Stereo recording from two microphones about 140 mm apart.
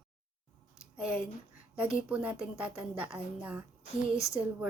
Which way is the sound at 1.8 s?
10° right (ahead or behind).